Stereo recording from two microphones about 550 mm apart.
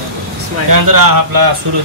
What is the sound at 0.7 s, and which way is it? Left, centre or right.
Speech, right.